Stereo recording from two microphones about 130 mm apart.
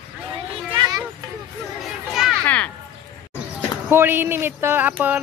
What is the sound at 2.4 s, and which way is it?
Speech, 10° left (ahead or behind).